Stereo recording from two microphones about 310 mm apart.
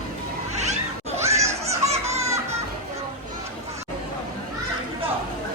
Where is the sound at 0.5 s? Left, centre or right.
Right.